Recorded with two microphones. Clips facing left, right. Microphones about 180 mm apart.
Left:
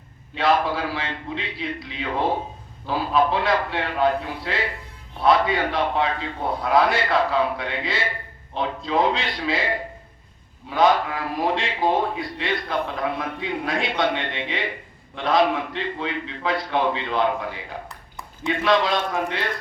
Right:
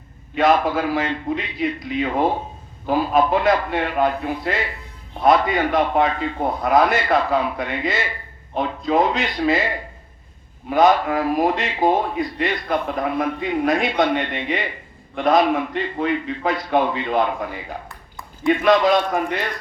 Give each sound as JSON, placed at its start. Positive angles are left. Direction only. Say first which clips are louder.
{"t": 0.3, "sound": "speech", "louder": "right 4 dB", "side_deg": -45}
{"t": 10.7, "sound": "speech", "louder": "right 3 dB", "side_deg": -45}
{"t": 18.6, "sound": "speech", "louder": "right 4 dB", "side_deg": -50}